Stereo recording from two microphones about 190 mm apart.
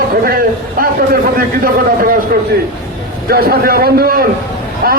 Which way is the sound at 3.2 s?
55° right (ahead or behind).